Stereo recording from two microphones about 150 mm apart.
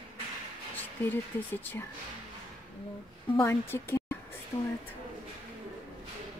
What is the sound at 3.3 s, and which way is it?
A woman's voice, 15° left (ahead or behind).